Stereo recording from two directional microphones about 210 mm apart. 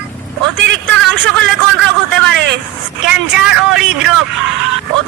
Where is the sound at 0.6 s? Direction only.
60° right (ahead or behind).